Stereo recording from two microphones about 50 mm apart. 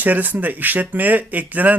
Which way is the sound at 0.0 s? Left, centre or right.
Right.